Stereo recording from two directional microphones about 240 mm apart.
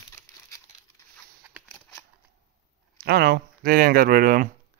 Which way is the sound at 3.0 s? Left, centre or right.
Right.